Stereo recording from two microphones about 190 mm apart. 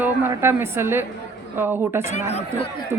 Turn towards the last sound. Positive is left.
turn(degrees=-10)  # may be behind; listen again after turning